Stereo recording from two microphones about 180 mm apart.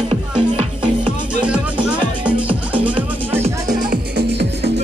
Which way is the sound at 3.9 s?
65° right (ahead or behind).